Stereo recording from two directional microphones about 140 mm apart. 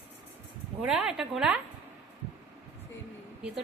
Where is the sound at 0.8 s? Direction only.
5° right (ahead or behind).